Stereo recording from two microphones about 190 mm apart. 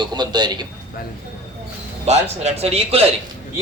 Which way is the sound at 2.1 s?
35° right (ahead or behind).